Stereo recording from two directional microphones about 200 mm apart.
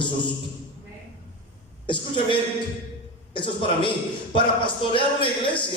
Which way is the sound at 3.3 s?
25° left (ahead or behind).